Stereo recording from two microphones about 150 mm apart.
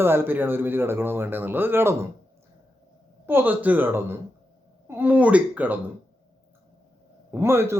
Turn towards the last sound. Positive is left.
turn(degrees=-15)  # may be behind; listen again after turning